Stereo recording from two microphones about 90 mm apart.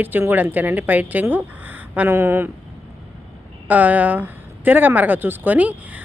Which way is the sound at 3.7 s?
20° right (ahead or behind).